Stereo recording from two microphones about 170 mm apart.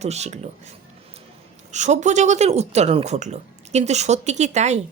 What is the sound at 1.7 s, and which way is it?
Speech, 45° right (ahead or behind).